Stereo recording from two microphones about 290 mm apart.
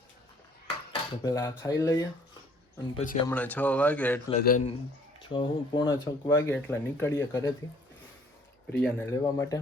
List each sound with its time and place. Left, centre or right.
1.2 s speech: centre
2.9 s a man's voice: left
3.2 s speech: centre
4.3 s a man's voice: left
5.3 s speech: centre
8.8 s speech: centre